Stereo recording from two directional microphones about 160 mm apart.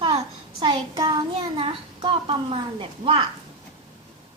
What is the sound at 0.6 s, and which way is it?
A child's voice, 30° right (ahead or behind).